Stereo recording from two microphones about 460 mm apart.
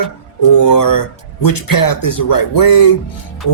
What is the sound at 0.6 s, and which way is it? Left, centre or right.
Speech, left.